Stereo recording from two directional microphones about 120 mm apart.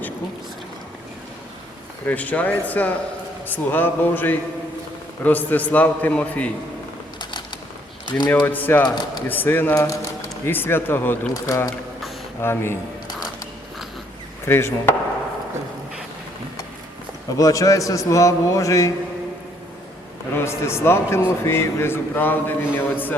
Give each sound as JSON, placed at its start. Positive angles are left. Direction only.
{"t": 2.0, "sound": "a man's voice", "side_deg": 15}
{"t": 7.2, "sound": "mechanisms", "side_deg": 40}
{"t": 8.3, "sound": "a man's voice", "side_deg": 15}
{"t": 9.7, "sound": "speech", "side_deg": 25}
{"t": 11.4, "sound": "a man's voice", "side_deg": 30}
{"t": 14.4, "sound": "a man's voice", "side_deg": 20}
{"t": 17.3, "sound": "a man's voice", "side_deg": 30}
{"t": 20.3, "sound": "a man's voice", "side_deg": 20}